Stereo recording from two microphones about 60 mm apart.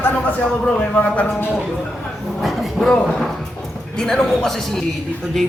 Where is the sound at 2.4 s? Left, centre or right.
Centre.